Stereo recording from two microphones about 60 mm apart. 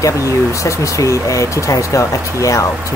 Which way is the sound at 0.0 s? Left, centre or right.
Left.